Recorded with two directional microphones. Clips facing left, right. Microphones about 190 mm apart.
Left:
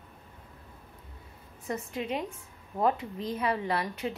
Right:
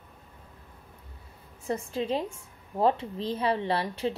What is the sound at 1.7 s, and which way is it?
Speech, 30° right (ahead or behind).